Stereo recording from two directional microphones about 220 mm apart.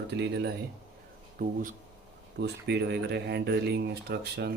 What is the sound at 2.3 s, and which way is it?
Speech, 50° right (ahead or behind).